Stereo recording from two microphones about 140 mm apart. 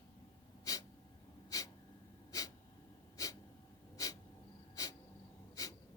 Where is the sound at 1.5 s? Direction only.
25° left (ahead or behind).